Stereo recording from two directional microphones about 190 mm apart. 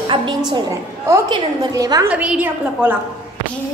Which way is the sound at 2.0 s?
5° right (ahead or behind).